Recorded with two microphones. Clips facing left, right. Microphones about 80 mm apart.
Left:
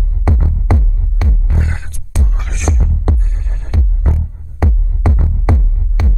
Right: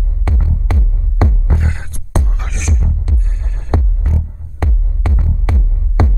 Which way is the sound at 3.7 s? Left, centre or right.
Right.